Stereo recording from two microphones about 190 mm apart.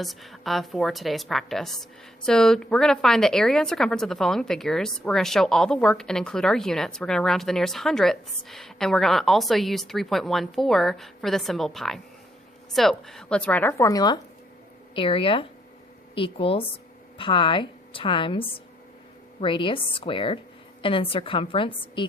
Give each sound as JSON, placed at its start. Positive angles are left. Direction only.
{"t": 0.0, "sound": "a woman's voice", "side_deg": 0}